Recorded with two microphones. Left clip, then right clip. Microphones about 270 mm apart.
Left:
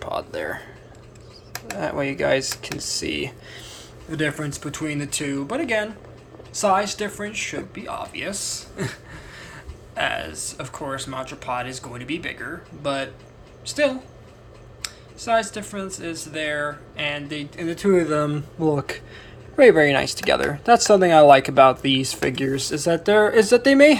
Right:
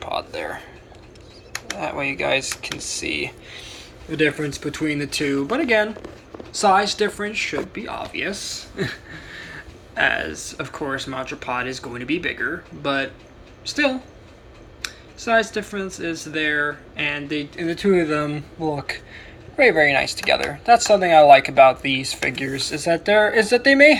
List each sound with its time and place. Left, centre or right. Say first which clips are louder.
0.0 s speech: right 1 dB; left
1.8 s speech: left 1 dB; left
4.1 s speech: right 5 dB; centre